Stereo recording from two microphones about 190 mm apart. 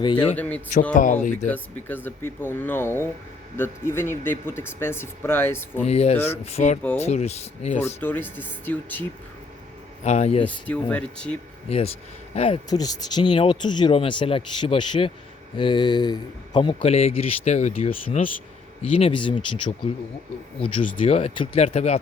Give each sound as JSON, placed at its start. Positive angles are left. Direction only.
{"t": 0.0, "sound": "speech", "side_deg": 25}
{"t": 0.3, "sound": "speech", "side_deg": 10}
{"t": 0.9, "sound": "speech", "side_deg": 45}
{"t": 1.5, "sound": "speech", "side_deg": 10}
{"t": 5.8, "sound": "speech", "side_deg": 35}
{"t": 6.1, "sound": "speech", "side_deg": 10}
{"t": 6.4, "sound": "speech", "side_deg": 35}
{"t": 8.0, "sound": "speech", "side_deg": 10}
{"t": 10.0, "sound": "speech", "side_deg": 35}
{"t": 10.4, "sound": "speech", "side_deg": 10}
{"t": 11.7, "sound": "speech", "side_deg": 30}
{"t": 12.7, "sound": "speech", "side_deg": 20}
{"t": 20.9, "sound": "speech", "side_deg": 30}